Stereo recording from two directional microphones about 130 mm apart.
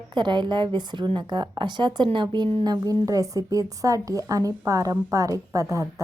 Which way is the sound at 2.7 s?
30° right (ahead or behind).